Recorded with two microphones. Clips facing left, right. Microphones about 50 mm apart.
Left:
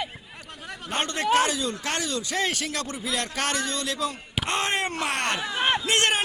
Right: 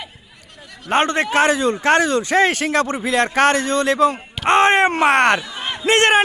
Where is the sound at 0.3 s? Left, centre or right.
Left.